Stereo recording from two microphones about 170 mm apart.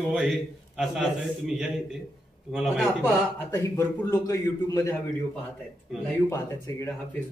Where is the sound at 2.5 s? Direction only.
Centre (ahead or behind).